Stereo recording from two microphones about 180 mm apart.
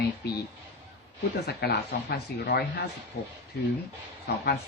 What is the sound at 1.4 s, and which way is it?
Speech, 65° left (ahead or behind).